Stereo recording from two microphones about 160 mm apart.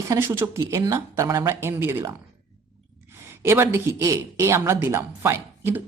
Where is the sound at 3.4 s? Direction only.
15° right (ahead or behind).